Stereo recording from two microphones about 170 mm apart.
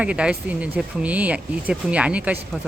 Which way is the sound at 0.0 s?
5° right (ahead or behind).